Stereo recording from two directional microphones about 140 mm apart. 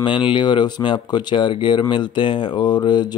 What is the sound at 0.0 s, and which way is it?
Speech, 35° left (ahead or behind).